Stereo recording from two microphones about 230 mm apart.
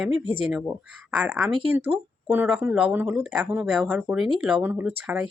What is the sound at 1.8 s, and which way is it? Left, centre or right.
Speech, right.